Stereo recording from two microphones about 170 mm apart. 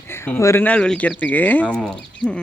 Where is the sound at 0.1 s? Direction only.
15° left (ahead or behind).